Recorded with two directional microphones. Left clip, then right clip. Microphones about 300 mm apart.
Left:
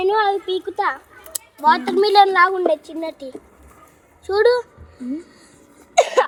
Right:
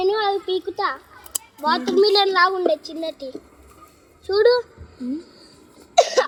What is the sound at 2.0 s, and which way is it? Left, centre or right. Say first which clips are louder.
A child's voice: left 2 dB; left.